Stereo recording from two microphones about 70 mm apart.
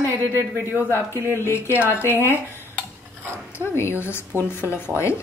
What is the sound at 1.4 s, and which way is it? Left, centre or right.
Speech, left.